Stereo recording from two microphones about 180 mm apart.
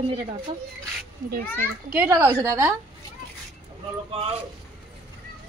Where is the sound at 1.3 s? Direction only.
55° right (ahead or behind).